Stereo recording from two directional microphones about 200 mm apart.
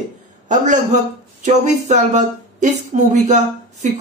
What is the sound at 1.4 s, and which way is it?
Speech, 35° right (ahead or behind).